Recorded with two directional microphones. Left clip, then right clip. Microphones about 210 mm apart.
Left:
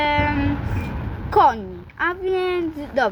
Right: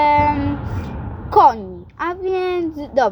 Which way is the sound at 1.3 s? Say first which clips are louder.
Right 4 dB; 15° right (ahead or behind).